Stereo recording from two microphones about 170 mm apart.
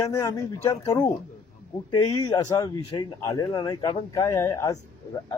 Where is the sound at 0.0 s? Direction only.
20° left (ahead or behind).